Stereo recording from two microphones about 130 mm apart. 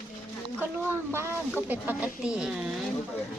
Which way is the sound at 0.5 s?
15° right (ahead or behind).